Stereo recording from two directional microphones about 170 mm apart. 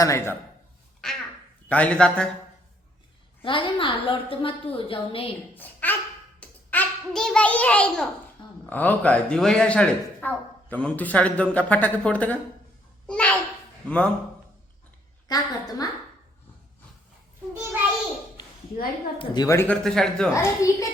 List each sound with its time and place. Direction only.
0.0 s speech: 15° left (ahead or behind)
1.0 s a sound: 5° left (ahead or behind)
1.7 s speech: 10° left (ahead or behind)
3.4 s a woman's voice: 30° left (ahead or behind)
5.5 s a woman's voice: 10° left (ahead or behind)
15.3 s a woman's voice: 20° left (ahead or behind)
19.2 s speech: 25° left (ahead or behind); by 20.3 s 5° left (ahead or behind)
20.3 s speech: 20° left (ahead or behind)